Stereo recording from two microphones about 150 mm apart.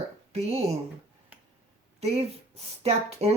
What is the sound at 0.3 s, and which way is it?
Speech, 45° right (ahead or behind).